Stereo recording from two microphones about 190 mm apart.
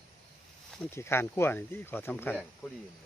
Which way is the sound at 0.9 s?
15° left (ahead or behind).